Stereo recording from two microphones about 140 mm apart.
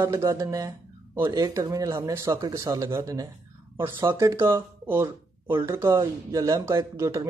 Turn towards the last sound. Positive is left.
turn(degrees=-20)  # may be behind; listen again after turning